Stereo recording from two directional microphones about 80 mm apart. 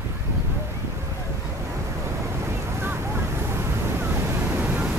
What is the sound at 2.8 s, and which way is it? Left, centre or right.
Waves, right.